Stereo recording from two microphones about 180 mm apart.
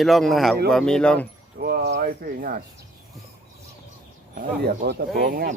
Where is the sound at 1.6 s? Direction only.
60° right (ahead or behind).